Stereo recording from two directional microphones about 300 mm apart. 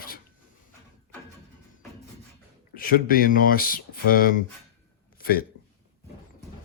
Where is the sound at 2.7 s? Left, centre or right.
Left.